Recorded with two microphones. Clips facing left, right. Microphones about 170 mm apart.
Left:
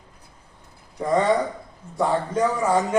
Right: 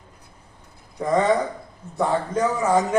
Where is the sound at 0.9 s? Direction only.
Centre (ahead or behind).